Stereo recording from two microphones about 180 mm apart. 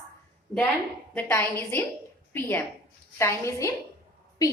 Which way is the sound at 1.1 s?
10° left (ahead or behind).